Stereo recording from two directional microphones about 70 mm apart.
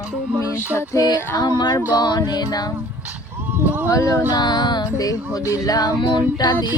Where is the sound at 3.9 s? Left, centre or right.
Left.